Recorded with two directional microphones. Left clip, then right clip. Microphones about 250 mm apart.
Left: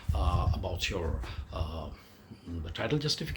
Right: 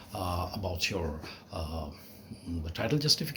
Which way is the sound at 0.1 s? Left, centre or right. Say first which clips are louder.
Even; centre.